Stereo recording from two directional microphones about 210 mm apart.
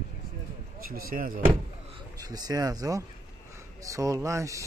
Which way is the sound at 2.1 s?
15° right (ahead or behind).